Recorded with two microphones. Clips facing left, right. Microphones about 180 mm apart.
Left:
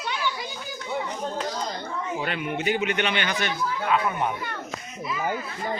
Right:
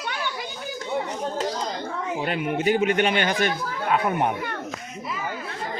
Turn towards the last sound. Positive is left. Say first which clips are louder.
# right 2 dB
turn(degrees=-50)  # may be behind; listen again after turning